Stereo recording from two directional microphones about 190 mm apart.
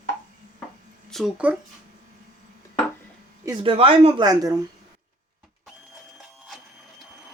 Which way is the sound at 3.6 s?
30° right (ahead or behind).